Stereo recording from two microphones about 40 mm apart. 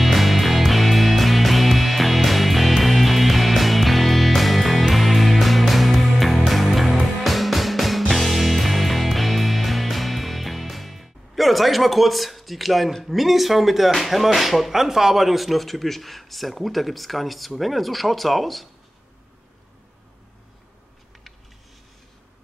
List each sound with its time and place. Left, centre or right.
0.0 s music: centre